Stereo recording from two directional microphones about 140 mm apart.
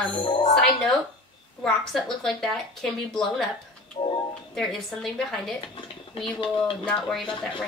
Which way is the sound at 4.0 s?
45° left (ahead or behind).